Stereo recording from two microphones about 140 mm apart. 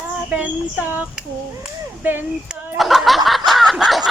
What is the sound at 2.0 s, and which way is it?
Speech, 10° right (ahead or behind).